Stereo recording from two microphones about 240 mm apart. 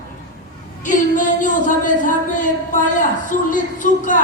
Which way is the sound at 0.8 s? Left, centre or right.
Left.